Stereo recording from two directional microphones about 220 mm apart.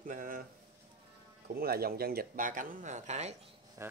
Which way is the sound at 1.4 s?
45° right (ahead or behind).